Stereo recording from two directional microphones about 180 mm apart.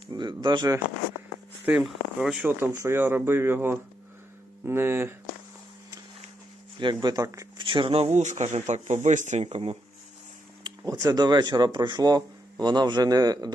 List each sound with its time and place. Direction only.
0.1 s speech: 25° right (ahead or behind)
1.6 s speech: 5° right (ahead or behind)
6.7 s speech: 25° right (ahead or behind)
8.1 s speech: 40° right (ahead or behind)
10.6 s speech: 20° right (ahead or behind)